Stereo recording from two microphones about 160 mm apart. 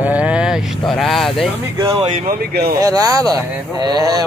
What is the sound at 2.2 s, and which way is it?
Speech, 65° right (ahead or behind).